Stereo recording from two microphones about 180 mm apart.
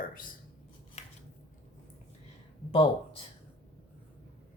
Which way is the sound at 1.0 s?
40° left (ahead or behind).